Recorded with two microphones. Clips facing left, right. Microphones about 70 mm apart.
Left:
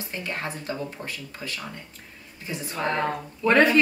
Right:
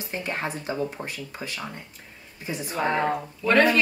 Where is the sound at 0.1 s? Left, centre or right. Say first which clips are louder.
Right 3 dB; centre.